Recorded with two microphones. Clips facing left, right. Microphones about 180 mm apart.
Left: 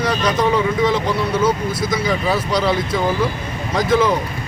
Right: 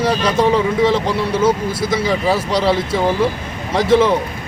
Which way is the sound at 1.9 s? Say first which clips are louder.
Right 3 dB; 30° right (ahead or behind).